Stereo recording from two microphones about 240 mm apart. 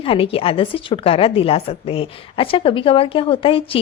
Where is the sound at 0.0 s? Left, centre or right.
Left.